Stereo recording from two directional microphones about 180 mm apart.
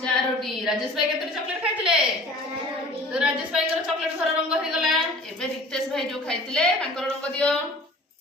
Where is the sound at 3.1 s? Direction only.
5° right (ahead or behind).